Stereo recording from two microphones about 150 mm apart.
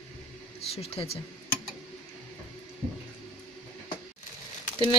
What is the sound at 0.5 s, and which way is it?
Speech, 45° left (ahead or behind).